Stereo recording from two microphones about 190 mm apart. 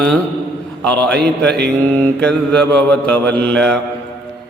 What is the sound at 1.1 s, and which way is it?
Speech, 60° right (ahead or behind).